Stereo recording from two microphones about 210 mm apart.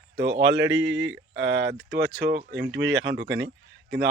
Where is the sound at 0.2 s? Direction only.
60° right (ahead or behind).